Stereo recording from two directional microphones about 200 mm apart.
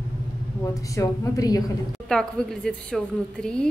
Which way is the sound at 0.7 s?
15° left (ahead or behind).